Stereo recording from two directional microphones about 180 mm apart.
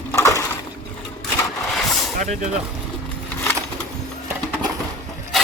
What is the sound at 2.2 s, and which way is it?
Speech, 45° right (ahead or behind).